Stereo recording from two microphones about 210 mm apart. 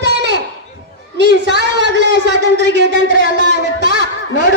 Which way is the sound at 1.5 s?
55° right (ahead or behind).